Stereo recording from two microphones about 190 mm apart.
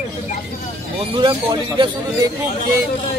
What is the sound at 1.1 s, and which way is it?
Speech, 25° right (ahead or behind).